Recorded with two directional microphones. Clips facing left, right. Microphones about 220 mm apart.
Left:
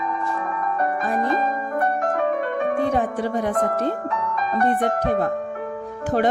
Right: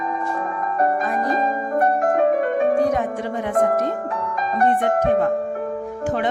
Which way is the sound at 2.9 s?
35° left (ahead or behind).